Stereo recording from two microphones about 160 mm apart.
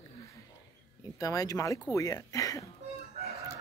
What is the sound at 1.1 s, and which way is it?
Speech, 20° left (ahead or behind).